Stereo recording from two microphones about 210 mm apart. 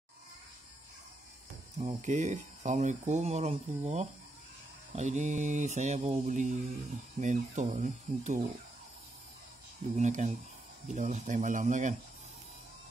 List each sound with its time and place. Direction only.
1.8 s speech: 30° right (ahead or behind)
9.9 s speech: 35° right (ahead or behind)